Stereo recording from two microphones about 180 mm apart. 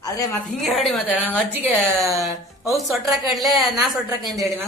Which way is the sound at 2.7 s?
Centre (ahead or behind).